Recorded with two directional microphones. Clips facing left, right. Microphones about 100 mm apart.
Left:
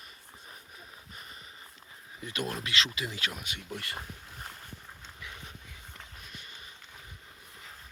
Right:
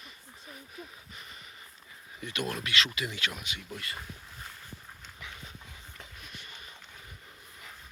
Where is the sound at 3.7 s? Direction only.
60° left (ahead or behind).